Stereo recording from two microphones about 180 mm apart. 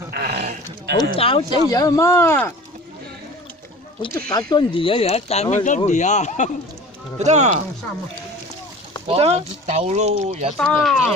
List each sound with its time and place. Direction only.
0.1 s a sound: 55° right (ahead or behind)
1.1 s speech: 30° left (ahead or behind); by 2.5 s 10° left (ahead or behind)
4.3 s speech: 25° left (ahead or behind); by 6.5 s 40° left (ahead or behind)
7.2 s speech: 40° right (ahead or behind)
9.0 s speech: 35° right (ahead or behind)
10.6 s speech: centre (ahead or behind)